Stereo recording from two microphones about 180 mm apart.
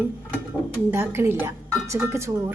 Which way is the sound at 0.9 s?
10° right (ahead or behind).